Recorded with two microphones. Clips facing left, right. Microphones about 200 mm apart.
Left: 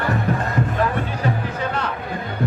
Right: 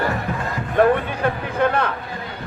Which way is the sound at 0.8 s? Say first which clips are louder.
Right 5 dB; 55° right (ahead or behind).